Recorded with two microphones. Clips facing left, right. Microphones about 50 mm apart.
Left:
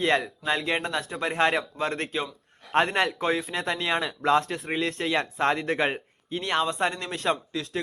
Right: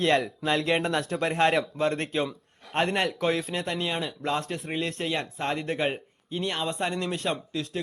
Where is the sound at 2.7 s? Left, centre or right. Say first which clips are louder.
Left 3 dB; left.